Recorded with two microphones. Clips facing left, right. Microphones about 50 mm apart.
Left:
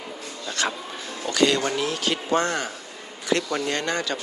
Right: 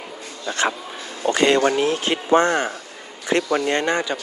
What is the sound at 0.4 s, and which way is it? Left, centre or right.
A man's voice, right.